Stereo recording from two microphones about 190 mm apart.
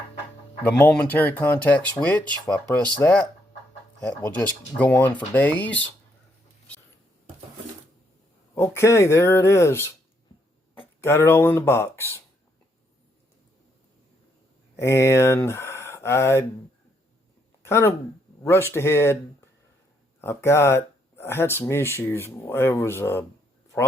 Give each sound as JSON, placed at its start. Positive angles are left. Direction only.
{"t": 0.6, "sound": "speech", "side_deg": 10}
{"t": 4.8, "sound": "speech", "side_deg": 10}
{"t": 8.5, "sound": "speech", "side_deg": 15}
{"t": 11.0, "sound": "speech", "side_deg": 10}
{"t": 14.8, "sound": "speech", "side_deg": 15}
{"t": 17.6, "sound": "speech", "side_deg": 15}
{"t": 20.2, "sound": "speech", "side_deg": 15}